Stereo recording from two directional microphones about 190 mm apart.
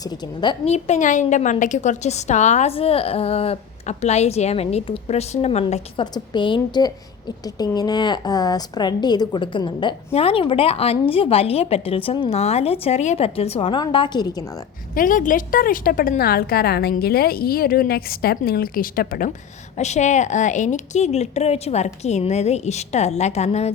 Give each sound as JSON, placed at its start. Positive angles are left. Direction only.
{"t": 0.0, "sound": "a woman's voice", "side_deg": 20}
{"t": 0.6, "sound": "a woman's voice", "side_deg": 35}
{"t": 14.9, "sound": "a woman's voice", "side_deg": 45}
{"t": 19.7, "sound": "a woman's voice", "side_deg": 35}